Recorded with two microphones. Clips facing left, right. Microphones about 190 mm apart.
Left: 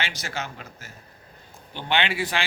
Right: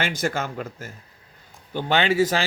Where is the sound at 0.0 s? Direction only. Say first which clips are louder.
Right 7 dB; 50° right (ahead or behind).